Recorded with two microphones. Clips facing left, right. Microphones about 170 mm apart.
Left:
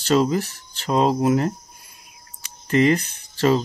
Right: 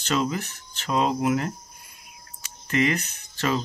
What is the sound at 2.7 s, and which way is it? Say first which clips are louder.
Speech: left 6 dB; 35° left (ahead or behind).